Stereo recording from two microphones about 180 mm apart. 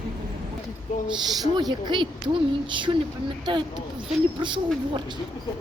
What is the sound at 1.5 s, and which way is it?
Speech, 25° right (ahead or behind).